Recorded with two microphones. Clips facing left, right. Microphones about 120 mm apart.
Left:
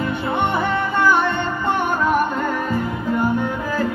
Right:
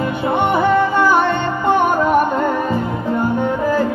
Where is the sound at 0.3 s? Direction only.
15° right (ahead or behind).